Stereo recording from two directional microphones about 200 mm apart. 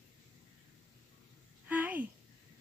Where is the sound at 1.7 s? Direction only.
10° right (ahead or behind).